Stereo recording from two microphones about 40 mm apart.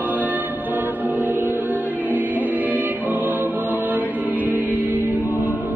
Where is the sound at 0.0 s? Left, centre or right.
Right.